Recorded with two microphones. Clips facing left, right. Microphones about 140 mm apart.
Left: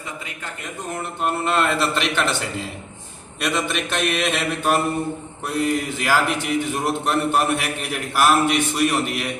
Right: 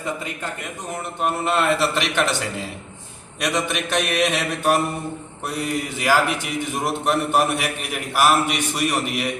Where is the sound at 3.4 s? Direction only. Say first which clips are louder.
Even; 10° right (ahead or behind).